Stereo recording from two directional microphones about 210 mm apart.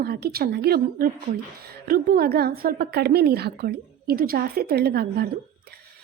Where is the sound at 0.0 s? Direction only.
50° right (ahead or behind).